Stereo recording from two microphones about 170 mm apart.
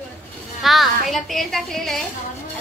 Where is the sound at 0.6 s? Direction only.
Centre (ahead or behind).